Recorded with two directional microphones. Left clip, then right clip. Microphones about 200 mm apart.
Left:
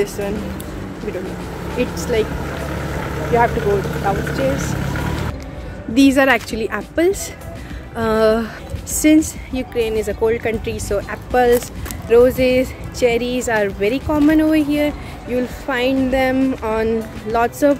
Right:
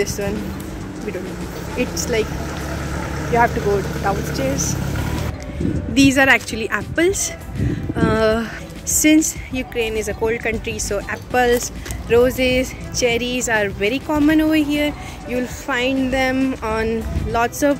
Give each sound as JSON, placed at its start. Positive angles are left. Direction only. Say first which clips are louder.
{"t": 1.8, "sound": "speech", "louder": "left 2 dB", "side_deg": -5}
{"t": 3.3, "sound": "speech", "louder": "left 1 dB", "side_deg": -15}
{"t": 5.9, "sound": "speech", "louder": "even", "side_deg": 5}